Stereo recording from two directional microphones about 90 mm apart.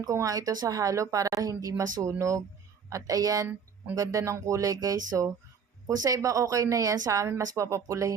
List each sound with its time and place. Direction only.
0.0 s speech: 35° right (ahead or behind)